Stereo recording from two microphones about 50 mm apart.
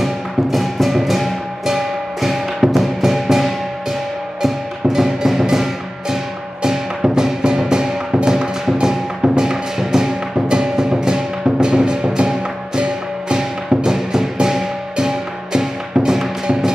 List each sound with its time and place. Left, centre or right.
0.0 s music: centre